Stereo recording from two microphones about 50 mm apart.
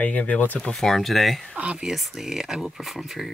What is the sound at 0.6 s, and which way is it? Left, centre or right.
Speech, centre.